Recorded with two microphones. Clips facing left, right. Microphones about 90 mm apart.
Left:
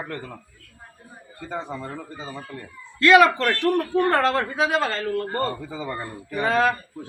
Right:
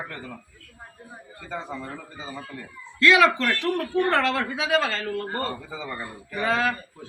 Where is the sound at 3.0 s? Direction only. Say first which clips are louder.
Left 3 dB; 45° left (ahead or behind).